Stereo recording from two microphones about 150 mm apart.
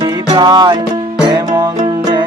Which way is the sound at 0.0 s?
25° right (ahead or behind).